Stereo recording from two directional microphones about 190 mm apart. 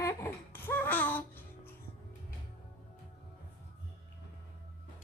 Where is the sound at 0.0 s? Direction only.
15° left (ahead or behind).